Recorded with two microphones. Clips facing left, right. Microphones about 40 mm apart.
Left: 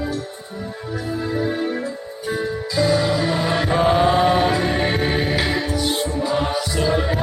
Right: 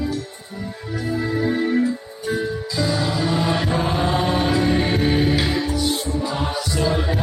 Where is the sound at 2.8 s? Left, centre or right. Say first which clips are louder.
Left 4 dB; centre.